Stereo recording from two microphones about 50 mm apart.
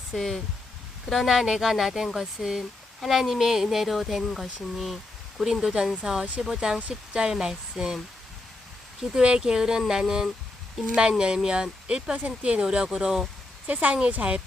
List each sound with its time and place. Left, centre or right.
0.1 s speech: centre
9.0 s speech: centre
12.1 s speech: right
12.6 s speech: centre
13.8 s speech: right